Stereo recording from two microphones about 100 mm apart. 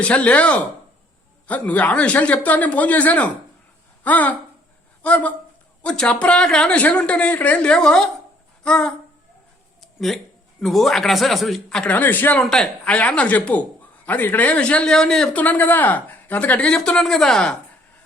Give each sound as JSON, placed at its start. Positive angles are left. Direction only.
{"t": 0.0, "sound": "a man's voice", "side_deg": 10}
{"t": 9.8, "sound": "a sound", "side_deg": 0}
{"t": 10.6, "sound": "speech", "side_deg": 0}
{"t": 11.8, "sound": "a man's voice", "side_deg": 15}
{"t": 12.4, "sound": "a man's voice", "side_deg": 5}